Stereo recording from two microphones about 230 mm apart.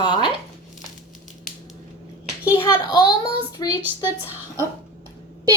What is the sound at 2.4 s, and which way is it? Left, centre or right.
A child's voice, centre.